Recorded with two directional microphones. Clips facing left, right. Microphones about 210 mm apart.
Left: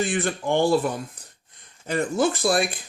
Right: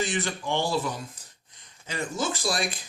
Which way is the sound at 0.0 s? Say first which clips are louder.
Left 5 dB; 55° left (ahead or behind).